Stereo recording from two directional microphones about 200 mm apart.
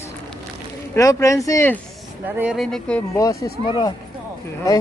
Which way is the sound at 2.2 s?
10° right (ahead or behind).